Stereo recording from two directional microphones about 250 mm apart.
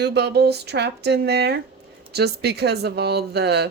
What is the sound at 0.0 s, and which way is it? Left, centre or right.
Speech, right.